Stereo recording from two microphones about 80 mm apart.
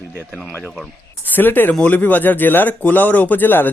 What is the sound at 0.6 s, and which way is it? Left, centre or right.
Speech, centre.